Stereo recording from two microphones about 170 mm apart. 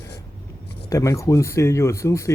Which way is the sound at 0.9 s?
20° left (ahead or behind).